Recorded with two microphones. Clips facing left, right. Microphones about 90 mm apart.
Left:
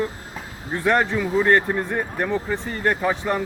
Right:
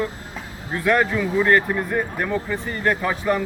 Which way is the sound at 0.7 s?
25° left (ahead or behind).